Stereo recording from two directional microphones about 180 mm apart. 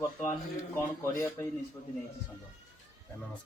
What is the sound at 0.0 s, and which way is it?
A man's voice, 15° left (ahead or behind).